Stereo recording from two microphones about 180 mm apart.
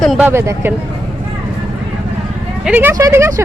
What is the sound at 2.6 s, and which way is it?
Speech, 10° right (ahead or behind).